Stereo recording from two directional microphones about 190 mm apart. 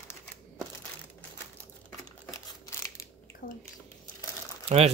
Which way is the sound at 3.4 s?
50° left (ahead or behind).